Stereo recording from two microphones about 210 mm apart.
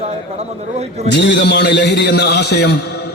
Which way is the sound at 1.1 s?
55° left (ahead or behind).